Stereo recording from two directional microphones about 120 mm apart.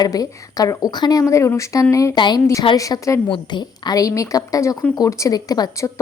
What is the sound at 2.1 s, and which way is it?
Speech, 40° left (ahead or behind).